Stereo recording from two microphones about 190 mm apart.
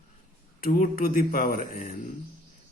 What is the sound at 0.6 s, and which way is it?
A man's voice, 45° left (ahead or behind).